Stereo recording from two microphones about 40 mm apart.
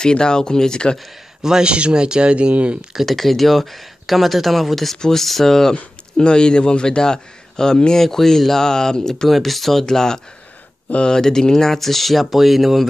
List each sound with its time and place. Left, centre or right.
0.0 s speech: centre
1.4 s a man's voice: centre; by 2.8 s right
3.1 s speech: centre
6.1 s speech: left
9.3 s speech: centre